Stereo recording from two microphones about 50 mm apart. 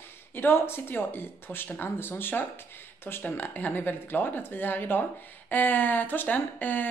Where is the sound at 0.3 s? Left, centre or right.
Left.